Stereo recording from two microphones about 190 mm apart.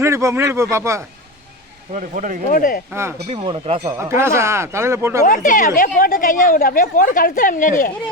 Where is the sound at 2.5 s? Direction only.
50° left (ahead or behind).